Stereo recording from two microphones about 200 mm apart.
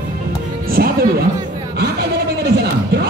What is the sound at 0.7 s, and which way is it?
Music, 50° right (ahead or behind).